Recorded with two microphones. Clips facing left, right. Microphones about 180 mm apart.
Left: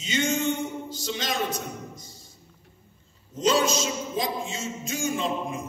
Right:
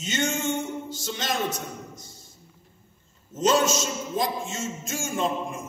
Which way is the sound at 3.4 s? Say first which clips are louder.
Right 1 dB; 50° right (ahead or behind).